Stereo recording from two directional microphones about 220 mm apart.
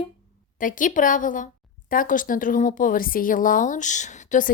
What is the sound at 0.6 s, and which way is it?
Speech, 35° left (ahead or behind).